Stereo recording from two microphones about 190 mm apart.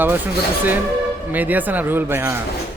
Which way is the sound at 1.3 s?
10° right (ahead or behind).